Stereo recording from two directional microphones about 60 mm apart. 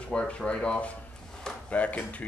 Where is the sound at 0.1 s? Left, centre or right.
Centre.